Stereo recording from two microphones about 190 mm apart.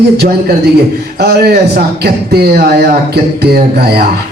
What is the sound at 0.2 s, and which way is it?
A man's voice, 55° right (ahead or behind).